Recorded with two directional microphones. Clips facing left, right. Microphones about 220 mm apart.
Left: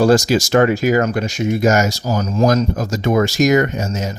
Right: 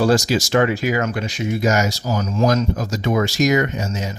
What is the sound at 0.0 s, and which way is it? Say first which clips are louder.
Speech: left 4 dB; 45° left (ahead or behind).